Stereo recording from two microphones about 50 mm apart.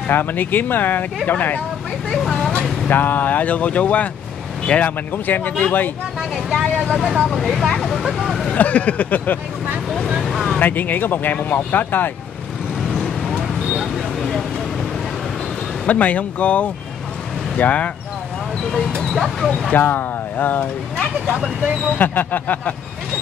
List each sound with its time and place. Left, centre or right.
0.1 s speech: left
2.0 s speech: centre
2.9 s speech: left
5.1 s speech: left
6.3 s speech: centre
8.5 s speech: left
9.8 s speech: centre
10.2 s vehicle: centre
10.6 s speech: left
13.7 s a sound: centre
15.9 s speech: left
19.1 s speech: centre
19.7 s speech: left
21.9 s speech: left